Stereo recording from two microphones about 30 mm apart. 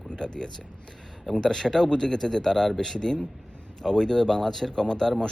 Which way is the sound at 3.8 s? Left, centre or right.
Left.